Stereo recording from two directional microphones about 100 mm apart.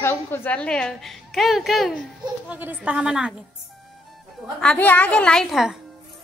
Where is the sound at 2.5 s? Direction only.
20° right (ahead or behind).